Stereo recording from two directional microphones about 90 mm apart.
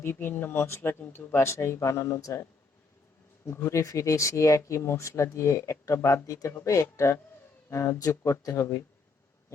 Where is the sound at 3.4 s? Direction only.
30° left (ahead or behind).